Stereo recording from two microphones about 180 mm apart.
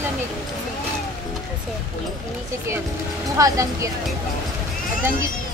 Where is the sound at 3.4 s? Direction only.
20° right (ahead or behind).